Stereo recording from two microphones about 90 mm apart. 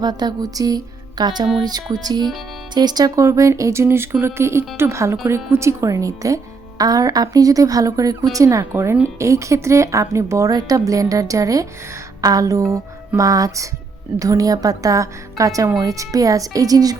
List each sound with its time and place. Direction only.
0.0 s music: 50° right (ahead or behind)
2.7 s speech: 50° right (ahead or behind)